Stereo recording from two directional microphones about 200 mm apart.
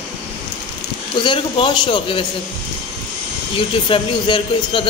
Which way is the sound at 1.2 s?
25° left (ahead or behind).